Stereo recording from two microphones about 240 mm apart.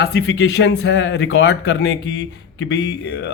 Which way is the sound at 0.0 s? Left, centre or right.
Left.